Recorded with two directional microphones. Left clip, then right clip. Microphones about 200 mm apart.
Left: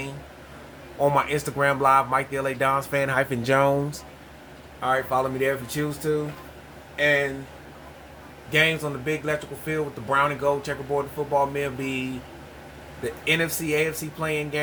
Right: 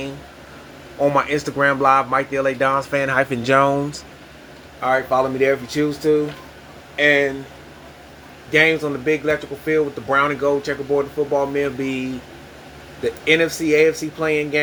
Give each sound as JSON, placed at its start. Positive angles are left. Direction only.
{"t": 1.0, "sound": "speech", "side_deg": 25}
{"t": 6.9, "sound": "speech", "side_deg": 20}
{"t": 8.5, "sound": "speech", "side_deg": 25}
{"t": 13.2, "sound": "speech", "side_deg": 20}